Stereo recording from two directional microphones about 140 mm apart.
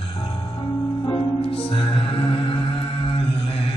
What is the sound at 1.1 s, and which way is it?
Music, 40° left (ahead or behind).